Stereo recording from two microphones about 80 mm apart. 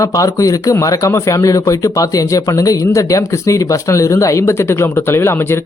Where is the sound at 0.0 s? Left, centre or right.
Left.